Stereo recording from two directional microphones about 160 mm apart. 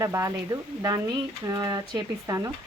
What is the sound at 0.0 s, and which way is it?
Speech, 20° right (ahead or behind).